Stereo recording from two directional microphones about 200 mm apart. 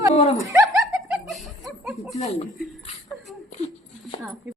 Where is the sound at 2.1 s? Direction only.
30° left (ahead or behind).